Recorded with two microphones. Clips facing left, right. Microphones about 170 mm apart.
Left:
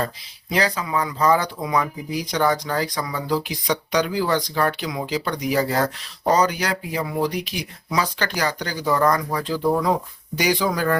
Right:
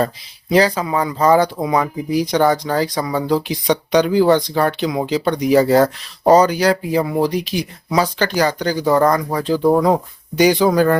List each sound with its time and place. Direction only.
0.8 s speech: 30° right (ahead or behind)
8.8 s speech: 40° right (ahead or behind)
9.5 s speech: 45° right (ahead or behind)
10.3 s speech: 30° right (ahead or behind)